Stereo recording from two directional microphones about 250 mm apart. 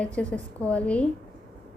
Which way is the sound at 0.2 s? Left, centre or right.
Centre.